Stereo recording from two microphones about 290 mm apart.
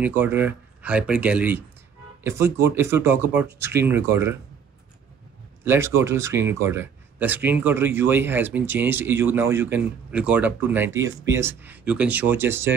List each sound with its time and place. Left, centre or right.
0.0 s speech: centre
5.6 s speech: centre